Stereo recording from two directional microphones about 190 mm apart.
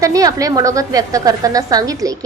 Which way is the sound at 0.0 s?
20° right (ahead or behind).